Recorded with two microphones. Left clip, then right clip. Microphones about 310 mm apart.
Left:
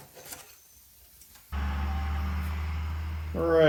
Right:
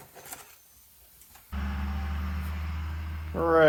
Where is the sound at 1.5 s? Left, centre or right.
Left.